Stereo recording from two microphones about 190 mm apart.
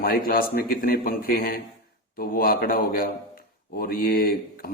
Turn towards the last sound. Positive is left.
turn(degrees=50)  # may be behind; listen again after turning